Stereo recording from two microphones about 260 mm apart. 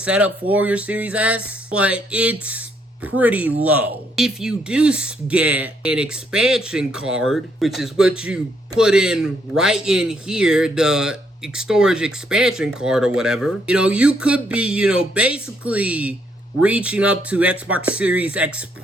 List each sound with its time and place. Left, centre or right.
0.0 s a man's voice: centre